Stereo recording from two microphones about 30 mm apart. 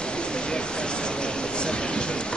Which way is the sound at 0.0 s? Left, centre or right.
Left.